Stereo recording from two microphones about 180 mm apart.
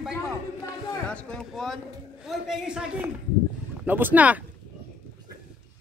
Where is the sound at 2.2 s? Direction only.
Centre (ahead or behind).